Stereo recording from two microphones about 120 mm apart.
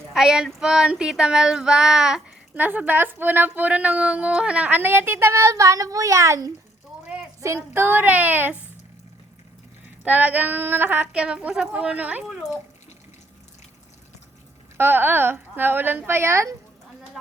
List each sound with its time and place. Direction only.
0.1 s child singing: 5° right (ahead or behind)
2.6 s speech: 15° right (ahead or behind)
10.0 s speech: 15° right (ahead or behind)
14.8 s speech: 15° right (ahead or behind)